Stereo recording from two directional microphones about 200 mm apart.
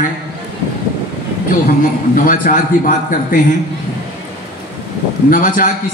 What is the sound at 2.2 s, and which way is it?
Speech, 45° left (ahead or behind).